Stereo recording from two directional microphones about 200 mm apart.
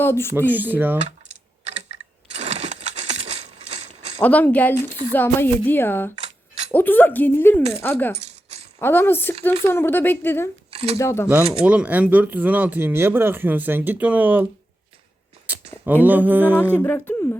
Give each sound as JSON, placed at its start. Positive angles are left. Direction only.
{"t": 0.0, "sound": "speech", "side_deg": 10}
{"t": 0.3, "sound": "speech", "side_deg": -10}
{"t": 1.6, "sound": "coin", "side_deg": -35}
{"t": 4.2, "sound": "speech", "side_deg": 10}
{"t": 8.1, "sound": "rattle", "side_deg": -30}
{"t": 8.8, "sound": "speech", "side_deg": 10}
{"t": 10.7, "sound": "a sound", "side_deg": -30}
{"t": 10.9, "sound": "speech", "side_deg": 15}
{"t": 11.6, "sound": "speech", "side_deg": -5}
{"t": 15.5, "sound": "a sound", "side_deg": -10}
{"t": 15.8, "sound": "speech", "side_deg": -10}
{"t": 16.8, "sound": "speech", "side_deg": 10}